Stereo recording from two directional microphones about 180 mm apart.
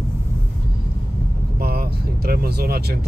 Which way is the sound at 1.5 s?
60° right (ahead or behind).